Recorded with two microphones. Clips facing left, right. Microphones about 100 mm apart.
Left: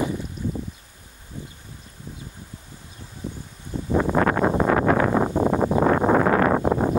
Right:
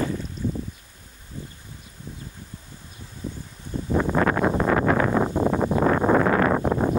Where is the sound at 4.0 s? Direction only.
35° left (ahead or behind).